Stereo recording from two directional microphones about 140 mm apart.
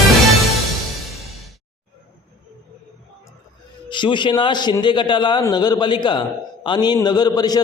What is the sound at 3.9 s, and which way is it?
A man's voice, 35° left (ahead or behind).